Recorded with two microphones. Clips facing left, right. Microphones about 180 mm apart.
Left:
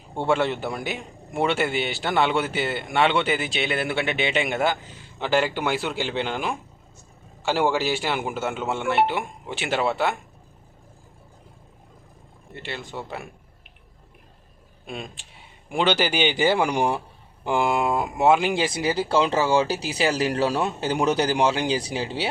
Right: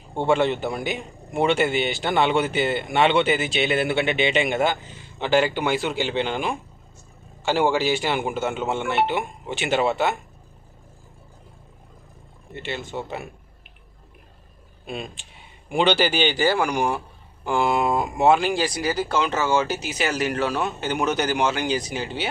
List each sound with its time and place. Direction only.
0.3 s a man's voice: centre (ahead or behind)
12.5 s a man's voice: centre (ahead or behind)
14.8 s a man's voice: centre (ahead or behind); by 17.0 s 25° left (ahead or behind)
17.4 s speech: 15° left (ahead or behind); by 22.3 s 30° left (ahead or behind)